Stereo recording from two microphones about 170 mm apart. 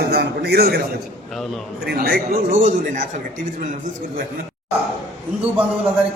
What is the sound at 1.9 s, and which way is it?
Speech, 65° right (ahead or behind).